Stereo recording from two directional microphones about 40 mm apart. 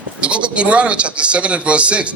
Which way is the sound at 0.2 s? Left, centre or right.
Right.